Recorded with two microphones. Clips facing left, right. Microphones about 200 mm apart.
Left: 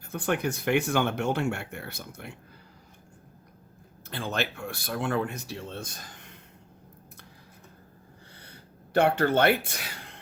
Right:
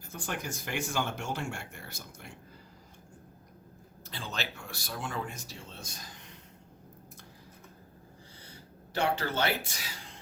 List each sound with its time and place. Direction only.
0.0 s speech: 60° left (ahead or behind)
4.1 s speech: 55° left (ahead or behind)
8.4 s a sound: 60° left (ahead or behind)